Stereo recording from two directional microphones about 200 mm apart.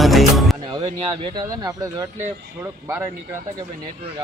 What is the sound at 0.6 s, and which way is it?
Speech, 25° right (ahead or behind).